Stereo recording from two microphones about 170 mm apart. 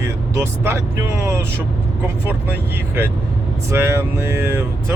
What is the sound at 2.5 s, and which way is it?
Speech, 15° right (ahead or behind).